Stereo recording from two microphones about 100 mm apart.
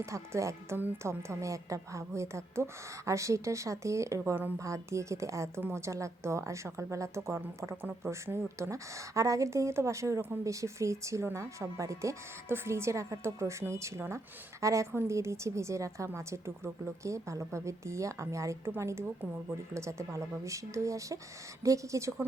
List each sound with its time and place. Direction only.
0.0 s a woman's voice: 30° right (ahead or behind)
0.8 s a woman's voice: 20° right (ahead or behind)
1.3 s a woman's voice: 30° right (ahead or behind)